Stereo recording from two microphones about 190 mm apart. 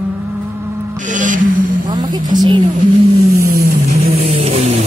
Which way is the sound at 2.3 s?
20° right (ahead or behind).